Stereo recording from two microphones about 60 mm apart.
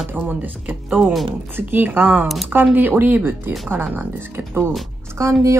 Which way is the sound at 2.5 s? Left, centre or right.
Right.